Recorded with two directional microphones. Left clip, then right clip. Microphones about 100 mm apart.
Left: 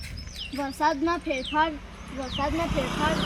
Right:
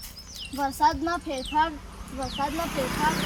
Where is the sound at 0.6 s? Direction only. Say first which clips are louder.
Right 2 dB; 35° right (ahead or behind).